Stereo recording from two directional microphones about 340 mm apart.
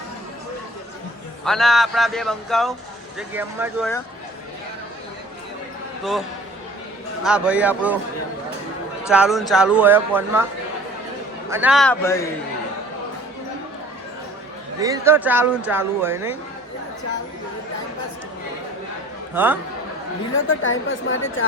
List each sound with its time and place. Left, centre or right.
1.5 s speech: centre
7.3 s speech: centre
9.0 s speech: centre
11.4 s speech: centre
14.8 s speech: centre
19.3 s a man's voice: centre
20.6 s a woman's voice: left